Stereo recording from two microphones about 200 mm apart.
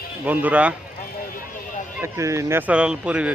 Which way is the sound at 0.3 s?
5° right (ahead or behind).